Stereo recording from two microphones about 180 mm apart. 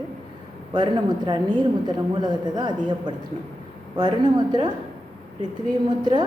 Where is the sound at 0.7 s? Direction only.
25° right (ahead or behind).